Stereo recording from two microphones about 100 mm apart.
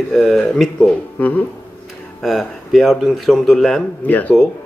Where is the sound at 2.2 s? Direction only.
Centre (ahead or behind).